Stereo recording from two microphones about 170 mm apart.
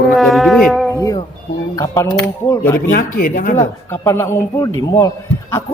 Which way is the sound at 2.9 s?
55° left (ahead or behind).